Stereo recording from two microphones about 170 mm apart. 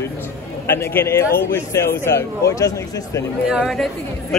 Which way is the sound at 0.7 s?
15° left (ahead or behind).